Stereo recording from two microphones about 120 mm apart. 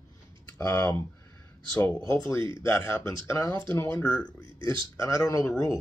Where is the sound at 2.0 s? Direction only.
25° left (ahead or behind).